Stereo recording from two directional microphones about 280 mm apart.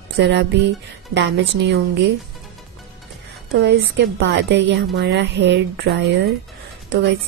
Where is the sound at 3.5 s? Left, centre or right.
Right.